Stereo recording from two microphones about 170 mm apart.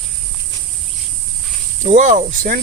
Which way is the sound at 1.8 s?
45° right (ahead or behind).